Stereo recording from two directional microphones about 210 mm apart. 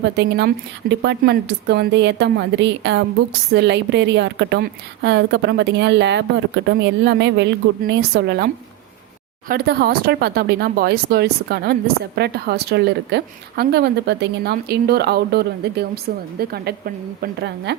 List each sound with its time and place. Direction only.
0.2 s a woman's voice: 55° right (ahead or behind)
9.5 s speech: 50° right (ahead or behind)